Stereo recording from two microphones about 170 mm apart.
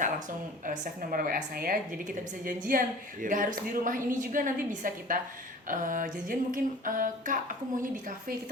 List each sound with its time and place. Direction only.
0.6 s a woman's voice: 50° right (ahead or behind)